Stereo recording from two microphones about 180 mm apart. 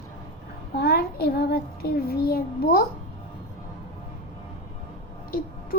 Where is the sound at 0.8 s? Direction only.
60° left (ahead or behind).